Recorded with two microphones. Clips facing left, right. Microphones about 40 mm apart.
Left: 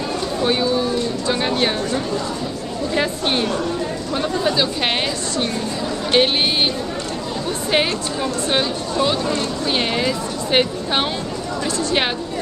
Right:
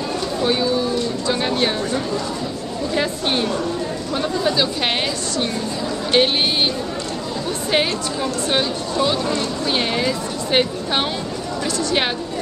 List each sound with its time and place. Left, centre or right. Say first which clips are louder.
0.4 s a sound: left 1 dB; centre
3.0 s speech: left 1 dB; centre
6.1 s speech: even; centre
7.7 s speech: even; centre